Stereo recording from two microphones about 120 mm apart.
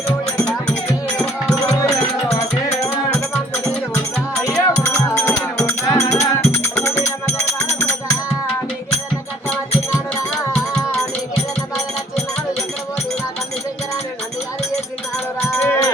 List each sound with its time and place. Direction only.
1.7 s music: 25° left (ahead or behind)
4.4 s music: 25° left (ahead or behind)
15.4 s a sound: 25° left (ahead or behind)